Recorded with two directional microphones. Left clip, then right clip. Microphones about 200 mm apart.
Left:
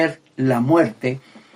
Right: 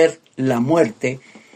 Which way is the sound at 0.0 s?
40° right (ahead or behind).